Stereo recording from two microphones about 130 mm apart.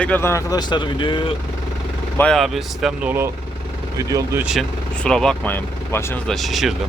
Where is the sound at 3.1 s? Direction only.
20° right (ahead or behind).